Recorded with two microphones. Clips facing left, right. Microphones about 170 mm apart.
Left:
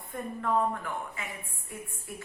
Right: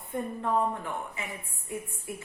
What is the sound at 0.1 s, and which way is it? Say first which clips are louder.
Speech: right 1 dB; 20° right (ahead or behind).